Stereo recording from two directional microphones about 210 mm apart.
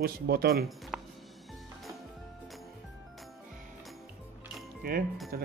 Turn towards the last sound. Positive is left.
turn(degrees=-45)  # may be behind; listen again after turning